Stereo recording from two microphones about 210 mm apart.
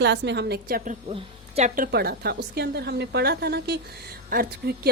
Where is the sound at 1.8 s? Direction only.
50° right (ahead or behind).